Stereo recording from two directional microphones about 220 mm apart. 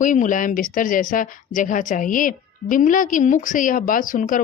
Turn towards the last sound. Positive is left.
turn(degrees=35)  # may be behind; listen again after turning